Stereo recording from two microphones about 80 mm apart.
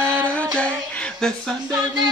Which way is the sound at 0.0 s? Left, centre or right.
Centre.